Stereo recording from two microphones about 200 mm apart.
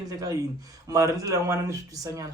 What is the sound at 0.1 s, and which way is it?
Speech, 15° right (ahead or behind).